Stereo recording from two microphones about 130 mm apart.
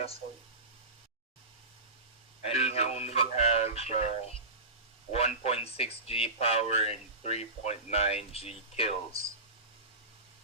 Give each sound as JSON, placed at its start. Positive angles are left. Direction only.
{"t": 2.4, "sound": "speech", "side_deg": 55}